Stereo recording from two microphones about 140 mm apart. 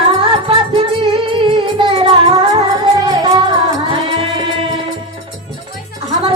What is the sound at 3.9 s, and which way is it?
Music, 40° right (ahead or behind).